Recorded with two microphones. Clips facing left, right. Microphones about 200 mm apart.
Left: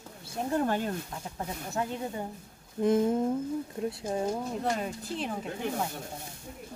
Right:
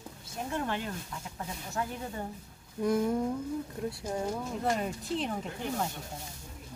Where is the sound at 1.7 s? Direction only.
25° left (ahead or behind).